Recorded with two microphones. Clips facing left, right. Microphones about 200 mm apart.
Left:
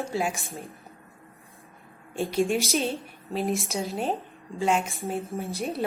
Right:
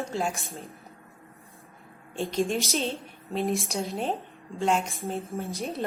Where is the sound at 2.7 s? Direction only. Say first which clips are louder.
Left 2 dB; 15° left (ahead or behind).